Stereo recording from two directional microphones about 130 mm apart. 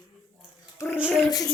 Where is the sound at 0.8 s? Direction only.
25° left (ahead or behind).